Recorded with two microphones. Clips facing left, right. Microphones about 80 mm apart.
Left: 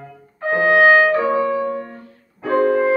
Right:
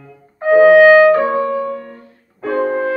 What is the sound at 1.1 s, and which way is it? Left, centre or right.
Music, right.